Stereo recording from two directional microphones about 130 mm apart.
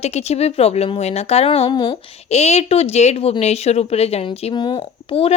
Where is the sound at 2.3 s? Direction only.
55° left (ahead or behind).